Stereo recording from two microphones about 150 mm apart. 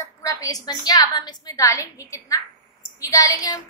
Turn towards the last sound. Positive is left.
turn(degrees=25)  # may be behind; listen again after turning